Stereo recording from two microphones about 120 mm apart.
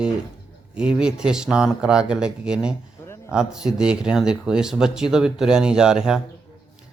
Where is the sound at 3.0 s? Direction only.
20° left (ahead or behind).